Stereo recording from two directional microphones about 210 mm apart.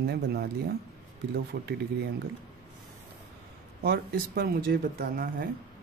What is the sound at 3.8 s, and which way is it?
Speech, 50° right (ahead or behind).